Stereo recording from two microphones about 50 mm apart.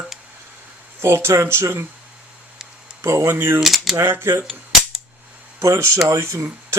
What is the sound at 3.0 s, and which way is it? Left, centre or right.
Speech, right.